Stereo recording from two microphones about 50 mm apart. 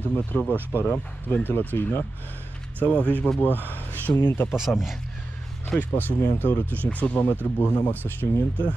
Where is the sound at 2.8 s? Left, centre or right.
Left.